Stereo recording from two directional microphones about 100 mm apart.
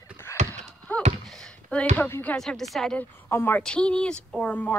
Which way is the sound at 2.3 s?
5° left (ahead or behind).